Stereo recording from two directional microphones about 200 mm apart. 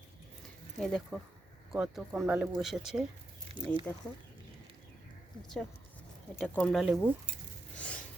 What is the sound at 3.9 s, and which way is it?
Speech, 10° left (ahead or behind).